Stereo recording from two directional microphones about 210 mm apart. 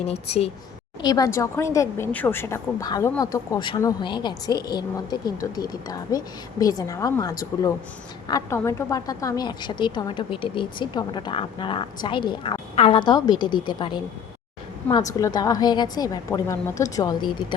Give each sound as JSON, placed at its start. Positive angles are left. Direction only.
{"t": 0.0, "sound": "a woman's voice", "side_deg": 30}
{"t": 1.0, "sound": "a woman's voice", "side_deg": 15}